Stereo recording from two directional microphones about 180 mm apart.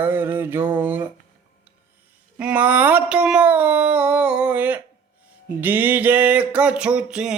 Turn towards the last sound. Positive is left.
turn(degrees=-5)  # may be behind; listen again after turning